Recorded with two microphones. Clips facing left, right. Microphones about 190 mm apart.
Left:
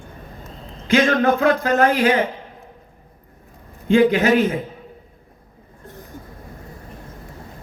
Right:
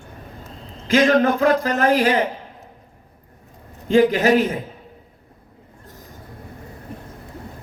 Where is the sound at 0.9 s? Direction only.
35° right (ahead or behind).